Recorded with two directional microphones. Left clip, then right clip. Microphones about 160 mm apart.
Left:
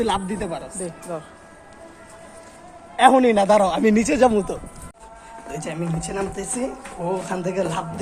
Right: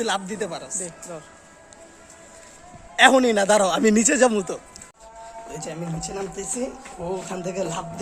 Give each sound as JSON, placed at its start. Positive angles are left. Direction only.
{"t": 0.0, "sound": "a man's voice", "side_deg": -50}
{"t": 1.1, "sound": "a man's voice", "side_deg": -5}
{"t": 2.9, "sound": "a man's voice", "side_deg": -35}
{"t": 4.3, "sound": "speech", "side_deg": -35}
{"t": 5.5, "sound": "speech", "side_deg": -20}